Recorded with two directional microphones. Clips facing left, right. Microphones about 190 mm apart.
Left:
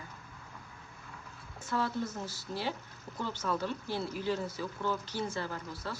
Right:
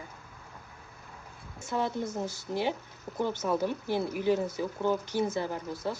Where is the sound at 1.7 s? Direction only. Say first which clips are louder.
Right 3 dB; 20° right (ahead or behind).